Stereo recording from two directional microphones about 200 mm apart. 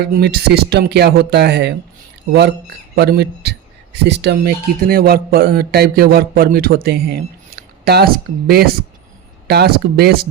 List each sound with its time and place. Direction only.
0.0 s speech: 55° right (ahead or behind)
2.9 s a man's voice: 55° right (ahead or behind)